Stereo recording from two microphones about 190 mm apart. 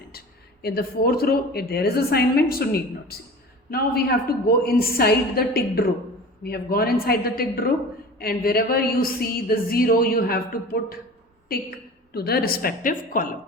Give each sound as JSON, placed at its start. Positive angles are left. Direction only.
{"t": 0.1, "sound": "speech", "side_deg": 55}
{"t": 12.1, "sound": "speech", "side_deg": 55}